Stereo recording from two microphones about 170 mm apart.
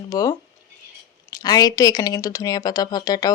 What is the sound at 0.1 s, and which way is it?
Speech, 20° left (ahead or behind).